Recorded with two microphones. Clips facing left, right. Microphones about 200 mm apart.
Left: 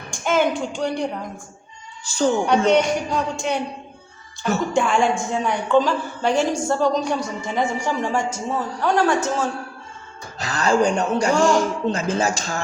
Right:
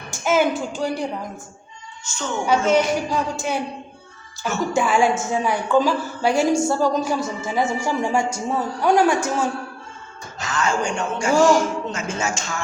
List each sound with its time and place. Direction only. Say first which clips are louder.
0.1 s speech: right 1 dB; 5° right (ahead or behind)
2.0 s a woman's voice: left 11 dB; 35° left (ahead or behind)
2.6 s speech: left 1 dB; 5° right (ahead or behind)
4.7 s a woman's voice: right 2 dB; 5° right (ahead or behind)
10.4 s a woman's voice: left 4 dB; 35° left (ahead or behind)
11.3 s speech: right 4 dB; 5° right (ahead or behind)
11.9 s a woman's voice: left 5 dB; 35° left (ahead or behind)